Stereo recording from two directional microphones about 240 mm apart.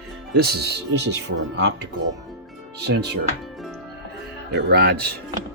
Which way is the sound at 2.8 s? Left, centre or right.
Right.